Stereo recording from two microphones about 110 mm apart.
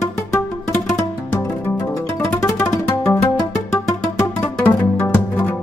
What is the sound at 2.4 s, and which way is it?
Music, 30° left (ahead or behind).